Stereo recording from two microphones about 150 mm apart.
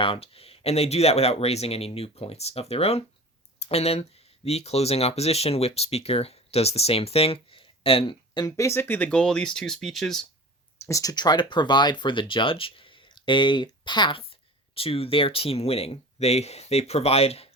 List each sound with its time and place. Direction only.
0.0 s speech: 40° left (ahead or behind); by 10.2 s centre (ahead or behind)
10.8 s speech: 20° left (ahead or behind); by 17.5 s 40° left (ahead or behind)